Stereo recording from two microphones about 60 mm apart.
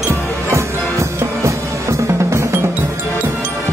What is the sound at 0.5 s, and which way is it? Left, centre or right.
Music, right.